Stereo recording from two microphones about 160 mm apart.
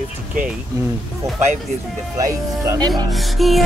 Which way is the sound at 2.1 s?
20° right (ahead or behind).